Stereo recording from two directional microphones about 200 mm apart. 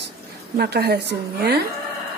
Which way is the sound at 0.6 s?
50° right (ahead or behind).